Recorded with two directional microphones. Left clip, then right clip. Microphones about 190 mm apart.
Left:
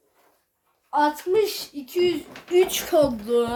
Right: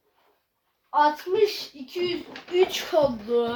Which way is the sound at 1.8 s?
65° left (ahead or behind).